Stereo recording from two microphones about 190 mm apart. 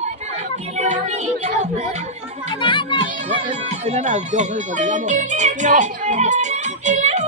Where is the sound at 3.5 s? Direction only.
35° right (ahead or behind).